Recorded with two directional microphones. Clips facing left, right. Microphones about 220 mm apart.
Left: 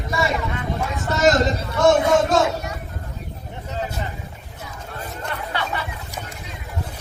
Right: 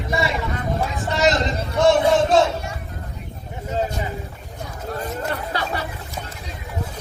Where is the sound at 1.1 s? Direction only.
45° left (ahead or behind).